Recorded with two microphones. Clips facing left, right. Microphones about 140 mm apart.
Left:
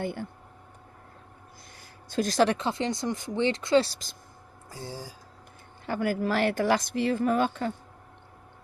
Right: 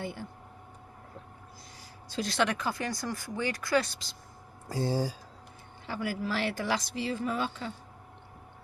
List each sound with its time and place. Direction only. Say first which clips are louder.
0.0 s speech: left 5 dB; 55° left (ahead or behind)
2.0 s speech: left 6 dB; 45° left (ahead or behind); by 4.0 s 30° left (ahead or behind)
4.7 s speech: right 10 dB; 75° right (ahead or behind)
5.8 s speech: left 6 dB; 50° left (ahead or behind)